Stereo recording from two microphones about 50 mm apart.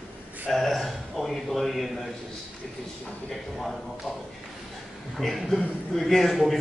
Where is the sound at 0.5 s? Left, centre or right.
Centre.